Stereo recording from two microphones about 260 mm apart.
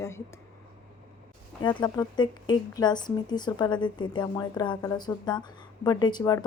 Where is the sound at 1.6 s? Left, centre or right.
Centre.